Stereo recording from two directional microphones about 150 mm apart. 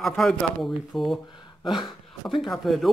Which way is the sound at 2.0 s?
Centre (ahead or behind).